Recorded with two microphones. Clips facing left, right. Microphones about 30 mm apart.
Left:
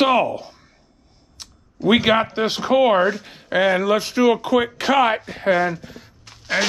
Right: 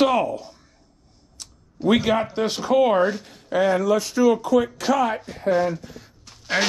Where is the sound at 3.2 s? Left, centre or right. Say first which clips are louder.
Left 2 dB; left.